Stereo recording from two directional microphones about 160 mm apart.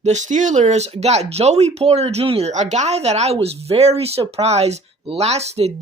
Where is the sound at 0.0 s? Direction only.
45° right (ahead or behind).